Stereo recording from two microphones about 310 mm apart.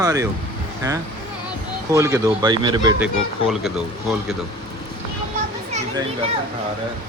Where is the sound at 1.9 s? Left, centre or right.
Centre.